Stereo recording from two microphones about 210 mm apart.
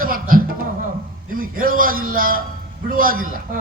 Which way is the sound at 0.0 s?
40° right (ahead or behind).